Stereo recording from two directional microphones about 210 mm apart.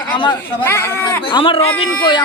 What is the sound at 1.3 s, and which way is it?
Speech, 25° left (ahead or behind).